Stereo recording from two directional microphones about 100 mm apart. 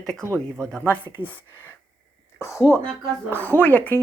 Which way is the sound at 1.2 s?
20° right (ahead or behind).